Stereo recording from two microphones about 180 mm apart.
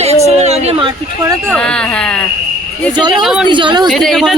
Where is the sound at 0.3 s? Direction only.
35° right (ahead or behind).